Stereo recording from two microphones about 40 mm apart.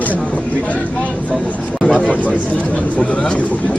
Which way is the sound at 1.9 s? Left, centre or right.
Left.